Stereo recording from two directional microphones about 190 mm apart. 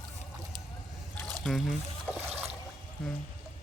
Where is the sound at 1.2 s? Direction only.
Centre (ahead or behind).